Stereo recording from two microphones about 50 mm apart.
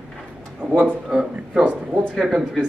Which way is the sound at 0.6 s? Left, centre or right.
Right.